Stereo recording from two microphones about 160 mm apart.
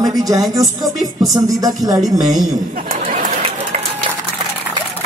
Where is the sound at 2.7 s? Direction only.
65° right (ahead or behind).